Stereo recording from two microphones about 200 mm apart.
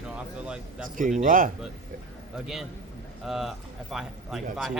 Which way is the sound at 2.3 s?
5° right (ahead or behind).